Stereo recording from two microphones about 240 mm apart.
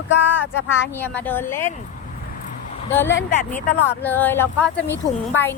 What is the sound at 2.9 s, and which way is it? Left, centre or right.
Speech, centre.